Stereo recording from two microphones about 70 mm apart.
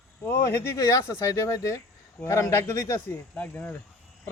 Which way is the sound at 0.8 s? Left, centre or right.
Left.